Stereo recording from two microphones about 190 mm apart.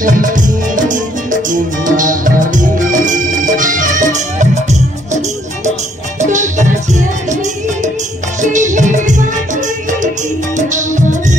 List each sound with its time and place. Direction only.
0.0 s music: 45° right (ahead or behind)
6.2 s music: 40° right (ahead or behind)
8.4 s music: 40° right (ahead or behind)
10.7 s music: 40° right (ahead or behind)